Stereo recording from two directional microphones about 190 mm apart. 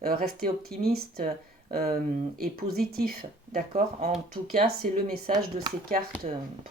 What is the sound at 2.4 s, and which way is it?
Speech, 50° right (ahead or behind).